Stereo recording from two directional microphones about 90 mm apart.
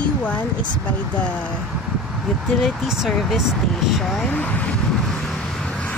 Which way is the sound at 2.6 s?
Centre (ahead or behind).